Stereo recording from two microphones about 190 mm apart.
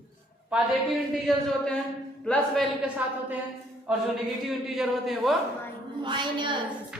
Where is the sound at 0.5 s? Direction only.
5° right (ahead or behind).